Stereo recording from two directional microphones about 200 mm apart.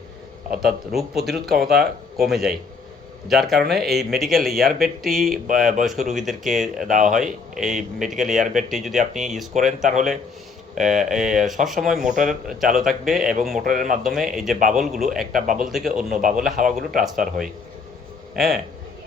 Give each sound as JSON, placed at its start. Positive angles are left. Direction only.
{"t": 0.5, "sound": "speech", "side_deg": 0}
{"t": 6.8, "sound": "speech", "side_deg": -40}
{"t": 7.1, "sound": "speech", "side_deg": 0}
{"t": 10.8, "sound": "speech", "side_deg": 0}
{"t": 11.9, "sound": "speech", "side_deg": -40}
{"t": 12.7, "sound": "speech", "side_deg": 0}
{"t": 15.3, "sound": "speech", "side_deg": -40}
{"t": 15.5, "sound": "speech", "side_deg": 0}